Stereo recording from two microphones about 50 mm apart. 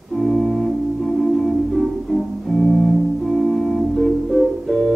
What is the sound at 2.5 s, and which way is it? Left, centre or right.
Music, centre.